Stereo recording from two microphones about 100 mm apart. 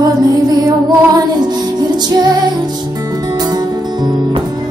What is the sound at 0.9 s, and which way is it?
Music, 40° right (ahead or behind).